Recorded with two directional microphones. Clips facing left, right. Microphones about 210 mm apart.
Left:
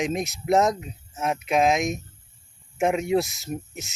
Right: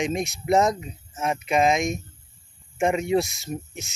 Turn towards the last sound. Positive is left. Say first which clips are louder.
# even
turn(degrees=5)  # may be behind; listen again after turning